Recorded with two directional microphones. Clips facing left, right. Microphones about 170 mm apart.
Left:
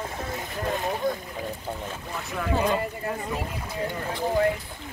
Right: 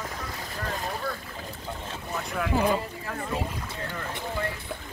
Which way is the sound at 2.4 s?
Centre (ahead or behind).